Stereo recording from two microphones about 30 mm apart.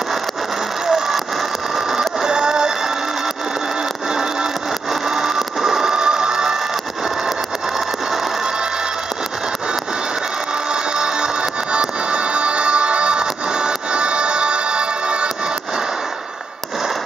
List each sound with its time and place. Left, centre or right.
0.8 s vehicle: centre
1.8 s a sound: centre
4.1 s music: right
5.0 s music: centre
5.9 s music: right
10.7 s music: right